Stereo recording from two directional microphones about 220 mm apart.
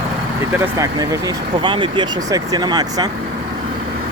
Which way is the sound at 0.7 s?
15° right (ahead or behind).